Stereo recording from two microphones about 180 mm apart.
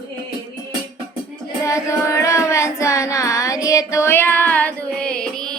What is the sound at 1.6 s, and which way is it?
Music, 15° left (ahead or behind).